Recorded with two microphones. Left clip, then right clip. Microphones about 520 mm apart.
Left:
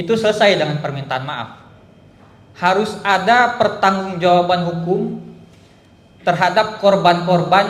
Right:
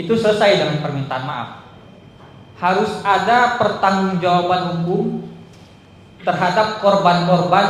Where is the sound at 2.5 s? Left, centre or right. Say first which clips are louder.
Left 1 dB; left.